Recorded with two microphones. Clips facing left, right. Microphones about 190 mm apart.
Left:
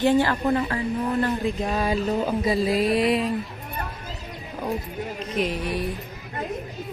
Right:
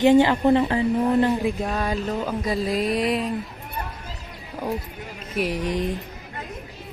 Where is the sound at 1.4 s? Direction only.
10° right (ahead or behind).